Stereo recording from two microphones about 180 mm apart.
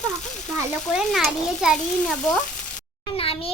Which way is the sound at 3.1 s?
30° left (ahead or behind).